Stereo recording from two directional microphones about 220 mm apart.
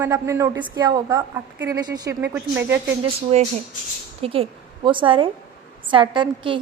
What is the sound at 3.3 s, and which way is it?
A woman's voice, 30° right (ahead or behind).